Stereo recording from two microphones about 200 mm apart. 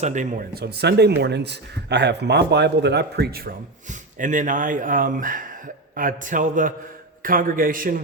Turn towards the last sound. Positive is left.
turn(degrees=-45)  # may be behind; listen again after turning